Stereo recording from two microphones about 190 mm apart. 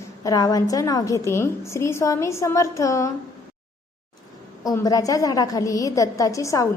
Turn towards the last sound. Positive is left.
turn(degrees=15)  # may be behind; listen again after turning